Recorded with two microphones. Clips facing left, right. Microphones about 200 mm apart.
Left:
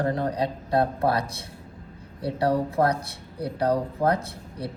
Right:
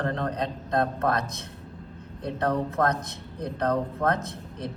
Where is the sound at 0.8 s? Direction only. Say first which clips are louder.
Left 2 dB; 35° left (ahead or behind).